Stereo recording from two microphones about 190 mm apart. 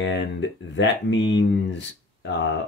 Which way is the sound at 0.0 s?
70° left (ahead or behind).